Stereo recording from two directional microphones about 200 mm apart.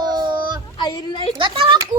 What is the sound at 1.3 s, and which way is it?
Speech, 25° right (ahead or behind).